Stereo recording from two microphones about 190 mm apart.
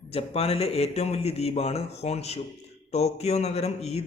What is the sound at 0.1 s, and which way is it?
Speech, 30° left (ahead or behind).